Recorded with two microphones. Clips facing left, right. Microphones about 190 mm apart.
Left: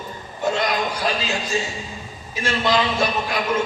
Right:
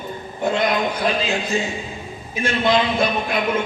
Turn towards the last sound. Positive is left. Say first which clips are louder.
# right 1 dB
turn(degrees=-55)  # may be behind; listen again after turning